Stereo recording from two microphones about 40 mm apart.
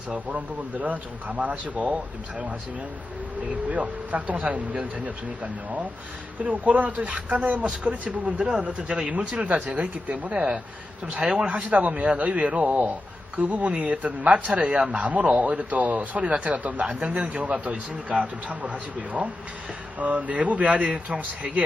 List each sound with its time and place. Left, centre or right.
0.1 s speech: right
3.5 s speech: right
11.1 s speech: right
11.4 s speech: right
16.8 s speech: right